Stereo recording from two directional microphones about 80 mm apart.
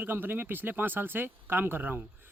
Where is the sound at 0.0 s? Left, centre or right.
Right.